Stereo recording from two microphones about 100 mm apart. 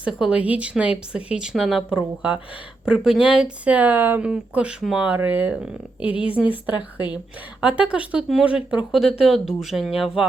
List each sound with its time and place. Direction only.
0.0 s speech: 10° right (ahead or behind)
6.1 s speech: 60° left (ahead or behind)
6.3 s speech: 15° right (ahead or behind)